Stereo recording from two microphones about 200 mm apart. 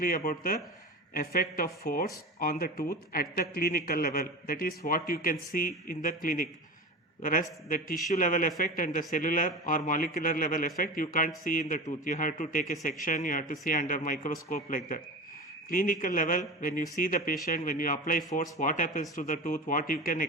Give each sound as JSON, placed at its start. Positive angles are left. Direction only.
{"t": 0.0, "sound": "a man's voice", "side_deg": 45}